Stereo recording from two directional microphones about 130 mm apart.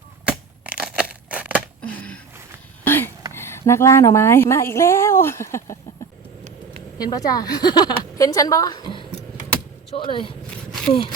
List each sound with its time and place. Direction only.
0.3 s crushing: 10° right (ahead or behind)
1.8 s a sound: 10° left (ahead or behind)
3.3 s a woman's voice: 20° left (ahead or behind)
7.0 s a woman's voice: 30° left (ahead or behind)